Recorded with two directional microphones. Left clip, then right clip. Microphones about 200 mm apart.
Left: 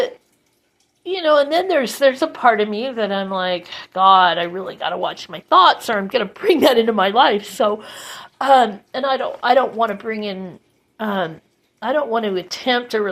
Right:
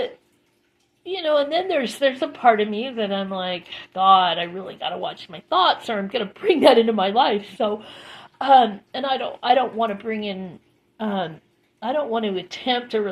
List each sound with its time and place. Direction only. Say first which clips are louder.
1.0 s a woman's voice: left 5 dB; 25° left (ahead or behind)